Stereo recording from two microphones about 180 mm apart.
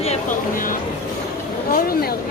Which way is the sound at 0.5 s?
50° left (ahead or behind).